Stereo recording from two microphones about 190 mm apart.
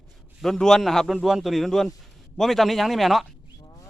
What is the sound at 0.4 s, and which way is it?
Speech, centre (ahead or behind).